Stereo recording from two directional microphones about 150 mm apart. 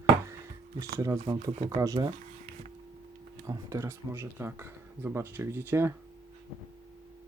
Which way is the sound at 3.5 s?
20° right (ahead or behind).